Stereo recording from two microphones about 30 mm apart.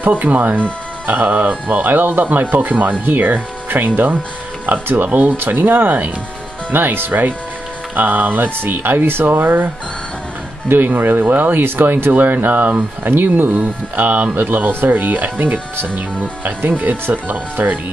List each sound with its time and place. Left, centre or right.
0.1 s speech: right
10.8 s speech: right